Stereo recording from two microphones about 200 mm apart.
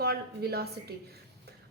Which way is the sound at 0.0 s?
50° right (ahead or behind).